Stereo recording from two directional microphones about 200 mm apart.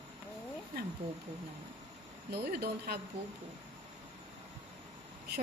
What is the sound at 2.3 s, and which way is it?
Speech, 55° right (ahead or behind).